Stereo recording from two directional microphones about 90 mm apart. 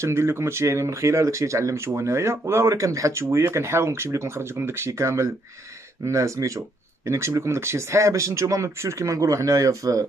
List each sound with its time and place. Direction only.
0.0 s speech: 30° right (ahead or behind)